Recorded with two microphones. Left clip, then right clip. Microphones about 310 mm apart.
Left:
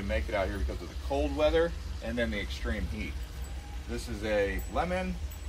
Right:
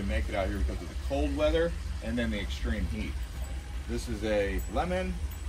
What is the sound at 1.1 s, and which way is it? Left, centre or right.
Speech, left.